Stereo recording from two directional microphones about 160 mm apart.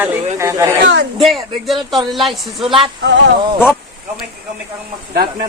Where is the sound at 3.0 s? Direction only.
90° right.